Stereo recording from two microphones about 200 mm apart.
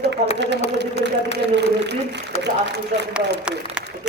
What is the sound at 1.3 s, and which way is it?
Speech, 55° right (ahead or behind).